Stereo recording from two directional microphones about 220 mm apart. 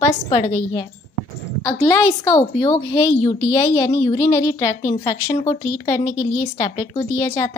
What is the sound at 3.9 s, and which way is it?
Speech, 25° left (ahead or behind).